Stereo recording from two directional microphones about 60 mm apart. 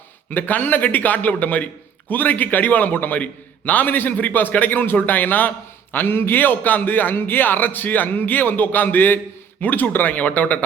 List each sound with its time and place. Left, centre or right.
0.3 s a man's voice: left